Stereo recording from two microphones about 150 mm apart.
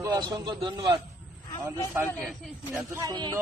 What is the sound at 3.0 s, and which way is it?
Speech, 25° right (ahead or behind).